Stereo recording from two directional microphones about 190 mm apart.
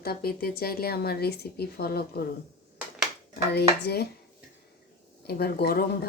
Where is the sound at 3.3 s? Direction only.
60° left (ahead or behind).